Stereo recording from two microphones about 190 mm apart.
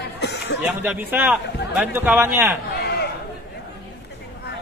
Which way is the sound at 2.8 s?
55° left (ahead or behind).